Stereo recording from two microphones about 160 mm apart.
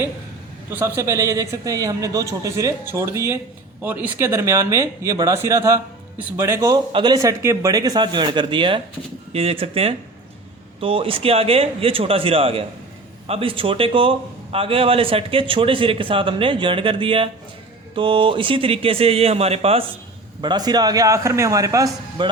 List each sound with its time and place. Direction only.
0.7 s a man's voice: 15° right (ahead or behind); by 19.8 s 40° right (ahead or behind)
20.4 s a man's voice: 25° right (ahead or behind)